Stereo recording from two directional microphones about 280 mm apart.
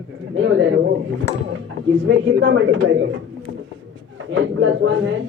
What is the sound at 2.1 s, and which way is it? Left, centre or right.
A woman's voice, right.